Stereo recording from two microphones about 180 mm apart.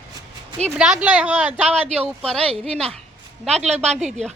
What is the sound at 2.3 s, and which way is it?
Speech, 5° left (ahead or behind).